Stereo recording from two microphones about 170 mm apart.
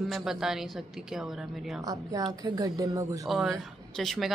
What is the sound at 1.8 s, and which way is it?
A woman's voice, 20° right (ahead or behind).